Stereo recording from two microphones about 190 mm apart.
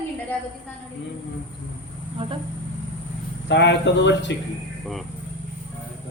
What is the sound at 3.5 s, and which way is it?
Speech, 65° left (ahead or behind).